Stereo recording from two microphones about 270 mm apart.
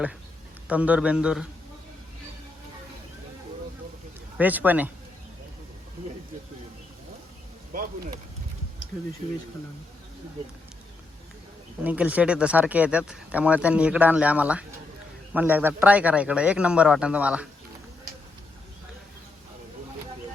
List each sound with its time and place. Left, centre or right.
0.7 s speech: centre
4.4 s speech: centre
7.7 s speech: right
11.8 s speech: centre